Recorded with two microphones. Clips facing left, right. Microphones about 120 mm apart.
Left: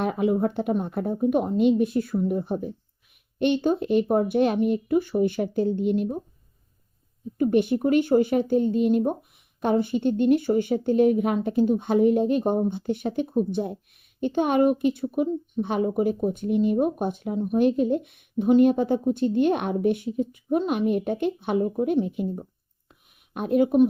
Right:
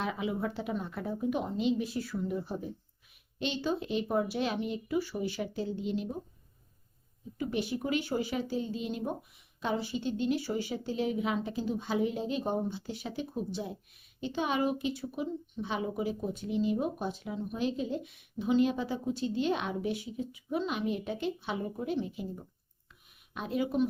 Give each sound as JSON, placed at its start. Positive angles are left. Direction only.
{"t": 0.0, "sound": "speech", "side_deg": 50}
{"t": 7.3, "sound": "speech", "side_deg": 50}
{"t": 22.9, "sound": "a sound", "side_deg": 55}